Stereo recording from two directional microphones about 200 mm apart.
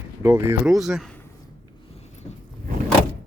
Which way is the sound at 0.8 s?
Centre (ahead or behind).